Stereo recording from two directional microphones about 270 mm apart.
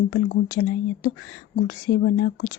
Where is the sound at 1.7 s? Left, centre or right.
Left.